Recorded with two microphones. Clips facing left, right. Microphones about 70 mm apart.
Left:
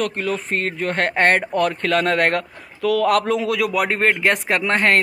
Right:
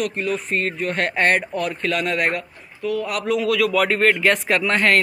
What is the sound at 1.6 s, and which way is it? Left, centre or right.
Speech, left.